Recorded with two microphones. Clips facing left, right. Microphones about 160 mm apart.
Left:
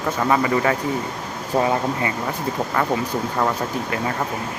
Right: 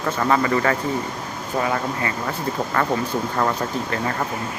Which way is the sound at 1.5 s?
25° left (ahead or behind).